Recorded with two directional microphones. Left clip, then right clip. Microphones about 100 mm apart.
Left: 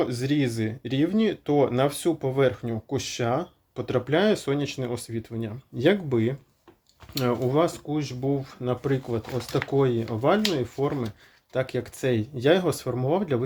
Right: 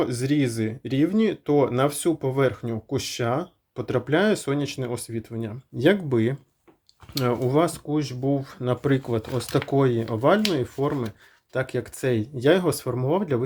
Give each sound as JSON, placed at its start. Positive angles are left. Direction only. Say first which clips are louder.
{"t": 0.0, "sound": "speech", "louder": "right 1 dB", "side_deg": -25}
{"t": 6.1, "sound": "speech", "louder": "right 2 dB", "side_deg": -50}
{"t": 7.1, "sound": "speech", "louder": "right 2 dB", "side_deg": -30}
{"t": 9.3, "sound": "speech", "louder": "right 1 dB", "side_deg": -65}
{"t": 10.8, "sound": "speech", "louder": "right 1 dB", "side_deg": -30}